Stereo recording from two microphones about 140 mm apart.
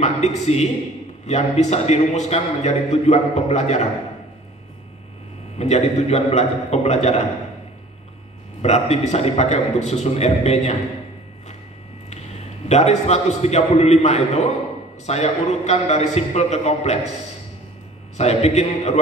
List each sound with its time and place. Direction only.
0.0 s a man's voice: 55° left (ahead or behind)
5.6 s a man's voice: 55° left (ahead or behind)
8.6 s a man's voice: 50° left (ahead or behind)
12.6 s a man's voice: 55° left (ahead or behind)
18.1 s a man's voice: 50° left (ahead or behind)